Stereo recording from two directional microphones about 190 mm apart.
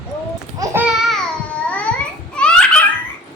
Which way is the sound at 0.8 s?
Centre (ahead or behind).